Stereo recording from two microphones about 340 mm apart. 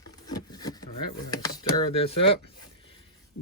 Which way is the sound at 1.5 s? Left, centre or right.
Centre.